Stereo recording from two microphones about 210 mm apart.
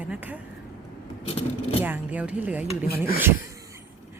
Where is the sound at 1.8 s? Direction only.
10° right (ahead or behind).